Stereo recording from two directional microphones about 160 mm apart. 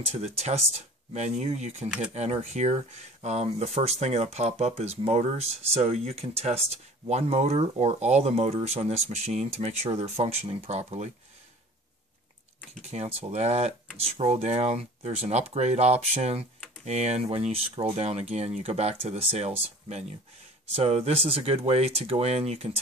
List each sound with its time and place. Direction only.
0.0 s speech: 40° right (ahead or behind)
12.9 s speech: 40° right (ahead or behind)